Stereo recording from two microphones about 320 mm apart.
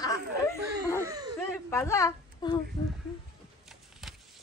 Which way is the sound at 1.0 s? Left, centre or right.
Centre.